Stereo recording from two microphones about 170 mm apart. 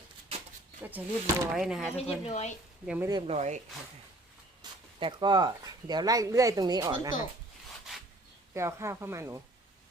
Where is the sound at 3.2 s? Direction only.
40° right (ahead or behind).